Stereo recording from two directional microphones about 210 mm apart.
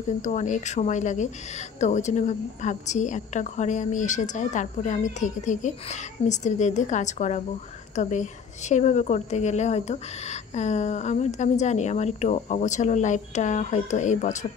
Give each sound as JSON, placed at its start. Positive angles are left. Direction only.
{"t": 0.2, "sound": "a woman's voice", "side_deg": 35}